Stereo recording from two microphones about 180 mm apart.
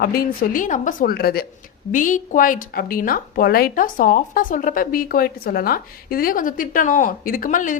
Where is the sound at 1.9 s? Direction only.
45° left (ahead or behind).